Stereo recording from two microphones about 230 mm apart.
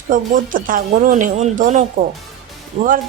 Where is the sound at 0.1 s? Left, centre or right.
Right.